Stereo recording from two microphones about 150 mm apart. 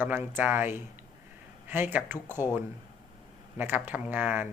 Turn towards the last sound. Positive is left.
turn(degrees=-15)  # may be behind; listen again after turning